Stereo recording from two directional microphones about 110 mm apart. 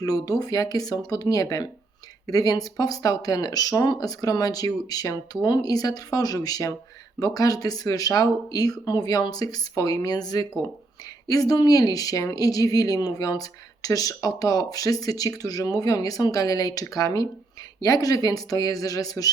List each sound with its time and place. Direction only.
0.0 s speech: 35° left (ahead or behind)